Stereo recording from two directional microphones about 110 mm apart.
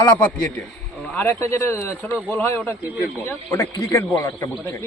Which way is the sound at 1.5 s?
25° left (ahead or behind).